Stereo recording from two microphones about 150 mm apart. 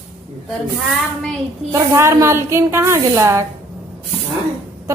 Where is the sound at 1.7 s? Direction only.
20° right (ahead or behind).